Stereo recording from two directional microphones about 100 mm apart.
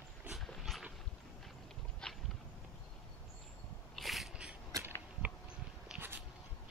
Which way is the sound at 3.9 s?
Centre (ahead or behind).